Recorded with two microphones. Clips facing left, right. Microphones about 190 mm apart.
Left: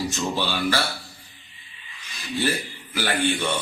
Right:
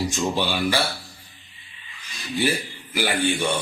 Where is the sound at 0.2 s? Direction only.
15° right (ahead or behind).